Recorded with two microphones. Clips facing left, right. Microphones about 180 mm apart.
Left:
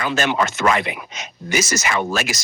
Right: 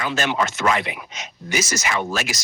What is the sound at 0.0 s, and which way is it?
A man's voice, 55° left (ahead or behind).